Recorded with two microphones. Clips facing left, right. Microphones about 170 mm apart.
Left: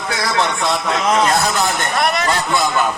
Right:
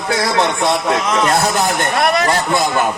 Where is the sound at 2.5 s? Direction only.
25° right (ahead or behind).